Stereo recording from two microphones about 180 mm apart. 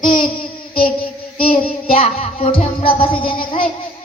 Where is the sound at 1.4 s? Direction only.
30° left (ahead or behind).